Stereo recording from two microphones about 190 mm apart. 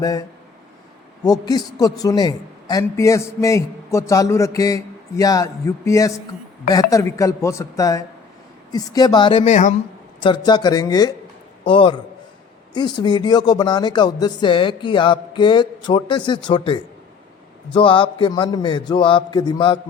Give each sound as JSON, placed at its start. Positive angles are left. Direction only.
{"t": 0.0, "sound": "a man's voice", "side_deg": 20}
{"t": 10.2, "sound": "speech", "side_deg": 25}
{"t": 17.7, "sound": "speech", "side_deg": 25}